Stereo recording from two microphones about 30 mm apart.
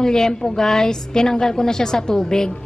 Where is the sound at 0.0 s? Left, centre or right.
Left.